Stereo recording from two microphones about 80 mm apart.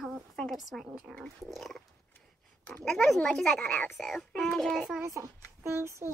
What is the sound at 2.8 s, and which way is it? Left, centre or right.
A child's voice, centre.